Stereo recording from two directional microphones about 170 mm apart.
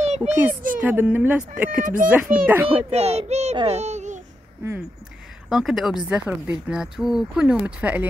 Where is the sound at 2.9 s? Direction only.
40° right (ahead or behind).